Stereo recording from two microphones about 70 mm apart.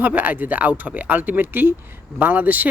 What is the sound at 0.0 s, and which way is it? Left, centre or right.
Speech, right.